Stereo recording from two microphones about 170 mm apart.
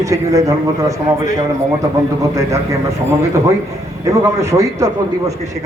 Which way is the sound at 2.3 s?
20° right (ahead or behind).